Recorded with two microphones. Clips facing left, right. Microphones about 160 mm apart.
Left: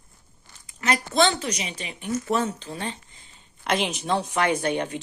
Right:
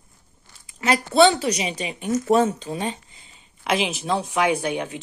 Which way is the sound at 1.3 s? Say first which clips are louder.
Right 6 dB; 35° right (ahead or behind).